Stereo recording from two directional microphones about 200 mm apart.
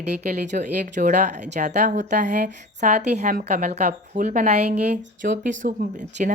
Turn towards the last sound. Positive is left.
turn(degrees=-40)  # may be behind; listen again after turning